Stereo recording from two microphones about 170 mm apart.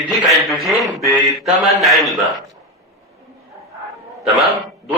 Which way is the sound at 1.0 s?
20° left (ahead or behind).